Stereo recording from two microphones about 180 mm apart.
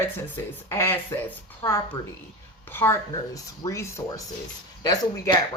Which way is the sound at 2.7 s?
15° left (ahead or behind).